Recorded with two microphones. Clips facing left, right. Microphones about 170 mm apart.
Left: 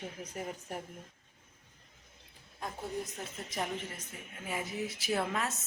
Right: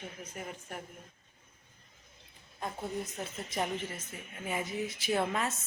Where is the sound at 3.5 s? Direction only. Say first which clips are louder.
Right 3 dB; centre (ahead or behind).